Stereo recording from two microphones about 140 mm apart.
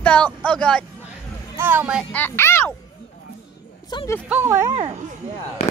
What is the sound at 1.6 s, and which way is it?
Speech, 15° right (ahead or behind).